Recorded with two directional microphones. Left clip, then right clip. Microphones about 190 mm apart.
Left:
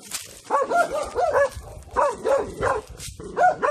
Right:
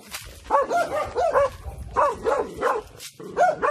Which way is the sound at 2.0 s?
Centre (ahead or behind).